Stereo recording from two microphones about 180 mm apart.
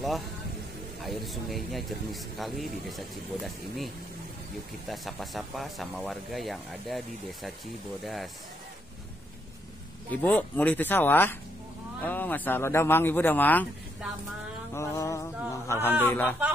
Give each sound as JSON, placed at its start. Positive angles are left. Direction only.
{"t": 1.0, "sound": "speech", "side_deg": 0}
{"t": 8.0, "sound": "speech", "side_deg": 0}
{"t": 10.1, "sound": "speech", "side_deg": 10}
{"t": 14.7, "sound": "speech", "side_deg": 15}